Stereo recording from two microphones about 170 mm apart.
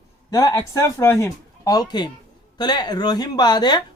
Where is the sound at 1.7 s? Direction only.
25° left (ahead or behind).